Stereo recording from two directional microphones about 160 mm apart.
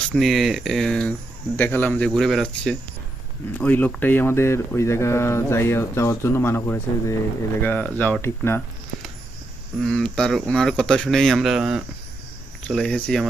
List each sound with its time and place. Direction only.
0.1 s speech: centre (ahead or behind)
9.8 s speech: 5° left (ahead or behind)